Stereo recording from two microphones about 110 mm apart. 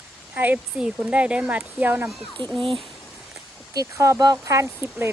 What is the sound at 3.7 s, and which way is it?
Speech, 30° right (ahead or behind).